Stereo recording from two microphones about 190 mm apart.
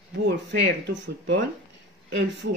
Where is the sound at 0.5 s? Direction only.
65° right (ahead or behind).